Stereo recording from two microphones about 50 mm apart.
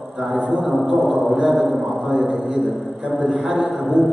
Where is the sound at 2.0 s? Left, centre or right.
Centre.